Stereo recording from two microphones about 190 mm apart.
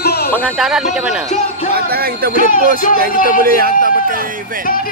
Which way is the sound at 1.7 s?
55° right (ahead or behind).